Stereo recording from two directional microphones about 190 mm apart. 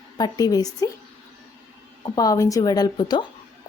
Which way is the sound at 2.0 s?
20° left (ahead or behind).